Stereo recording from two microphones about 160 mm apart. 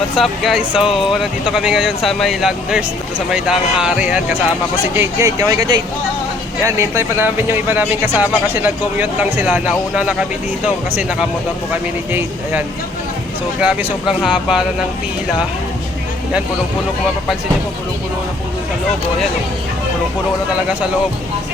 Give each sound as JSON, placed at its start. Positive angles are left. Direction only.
{"t": 0.2, "sound": "speech", "side_deg": 0}
{"t": 11.7, "sound": "speech", "side_deg": -10}